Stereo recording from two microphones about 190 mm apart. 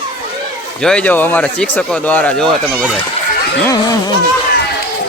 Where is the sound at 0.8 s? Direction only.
5° left (ahead or behind).